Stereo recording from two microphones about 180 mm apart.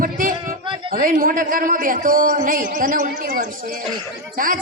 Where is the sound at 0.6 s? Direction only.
30° right (ahead or behind).